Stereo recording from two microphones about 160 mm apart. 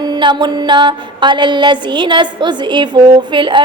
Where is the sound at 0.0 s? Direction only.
25° right (ahead or behind).